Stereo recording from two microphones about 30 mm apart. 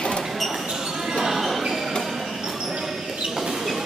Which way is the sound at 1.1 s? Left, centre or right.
Centre.